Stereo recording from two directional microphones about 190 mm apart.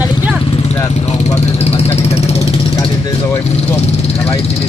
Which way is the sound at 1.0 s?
35° left (ahead or behind).